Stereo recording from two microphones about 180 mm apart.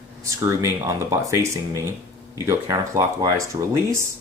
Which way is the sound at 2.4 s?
20° right (ahead or behind).